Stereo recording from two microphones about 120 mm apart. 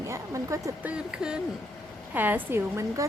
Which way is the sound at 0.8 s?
10° right (ahead or behind).